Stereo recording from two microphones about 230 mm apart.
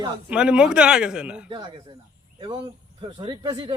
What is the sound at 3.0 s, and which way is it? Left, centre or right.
Speech, right.